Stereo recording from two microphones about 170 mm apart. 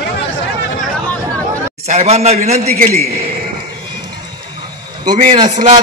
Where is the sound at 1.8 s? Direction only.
40° right (ahead or behind).